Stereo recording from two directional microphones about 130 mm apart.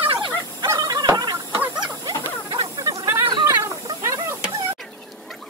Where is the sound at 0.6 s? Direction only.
30° right (ahead or behind).